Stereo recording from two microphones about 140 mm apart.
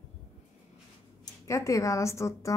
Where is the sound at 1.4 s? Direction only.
20° left (ahead or behind).